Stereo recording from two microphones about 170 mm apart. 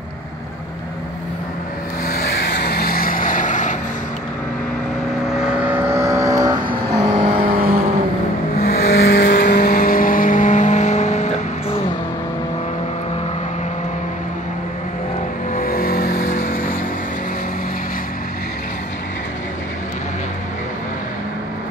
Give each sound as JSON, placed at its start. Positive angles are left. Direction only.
{"t": 2.0, "sound": "vehicle", "side_deg": 65}
{"t": 5.7, "sound": "vehicle", "side_deg": -15}
{"t": 7.0, "sound": "vehicle", "side_deg": -40}
{"t": 8.6, "sound": "vehicle", "side_deg": 65}
{"t": 15.5, "sound": "vehicle", "side_deg": 60}